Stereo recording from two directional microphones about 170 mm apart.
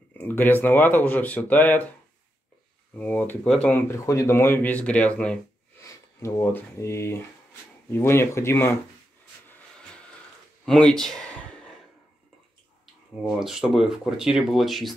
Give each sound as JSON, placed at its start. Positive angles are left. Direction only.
{"t": 0.2, "sound": "speech", "side_deg": 10}
{"t": 3.0, "sound": "speech", "side_deg": 10}
{"t": 10.6, "sound": "a sound", "side_deg": 5}
{"t": 13.4, "sound": "speech", "side_deg": 0}